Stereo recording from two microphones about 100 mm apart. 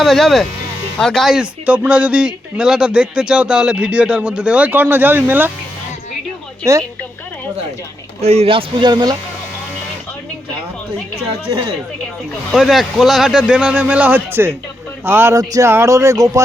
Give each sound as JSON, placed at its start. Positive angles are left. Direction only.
{"t": 0.0, "sound": "a man's voice", "side_deg": 0}
{"t": 8.2, "sound": "speech", "side_deg": -90}
{"t": 8.9, "sound": "speech", "side_deg": -45}
{"t": 12.5, "sound": "a man's voice", "side_deg": 0}
{"t": 15.4, "sound": "speech", "side_deg": -35}